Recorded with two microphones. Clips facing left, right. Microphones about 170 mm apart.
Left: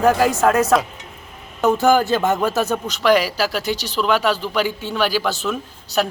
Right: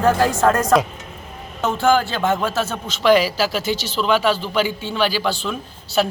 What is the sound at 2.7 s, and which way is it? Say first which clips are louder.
Speech: right 3 dB; centre (ahead or behind).